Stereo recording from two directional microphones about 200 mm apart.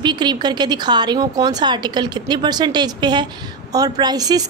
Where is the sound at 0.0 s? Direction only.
20° right (ahead or behind).